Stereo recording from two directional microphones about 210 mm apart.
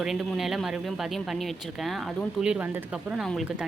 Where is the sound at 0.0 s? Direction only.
Centre (ahead or behind).